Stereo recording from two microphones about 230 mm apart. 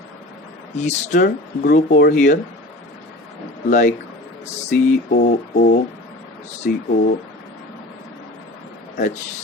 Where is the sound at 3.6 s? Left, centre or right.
Left.